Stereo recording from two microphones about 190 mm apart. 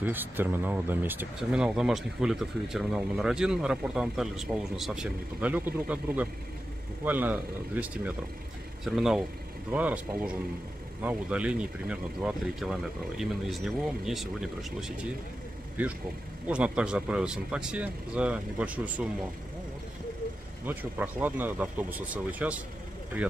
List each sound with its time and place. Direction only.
0.0 s speech: 10° right (ahead or behind)
20.6 s speech: 10° right (ahead or behind)